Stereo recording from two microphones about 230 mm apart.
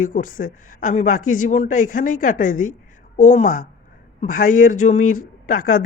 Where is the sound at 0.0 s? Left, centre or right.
Left.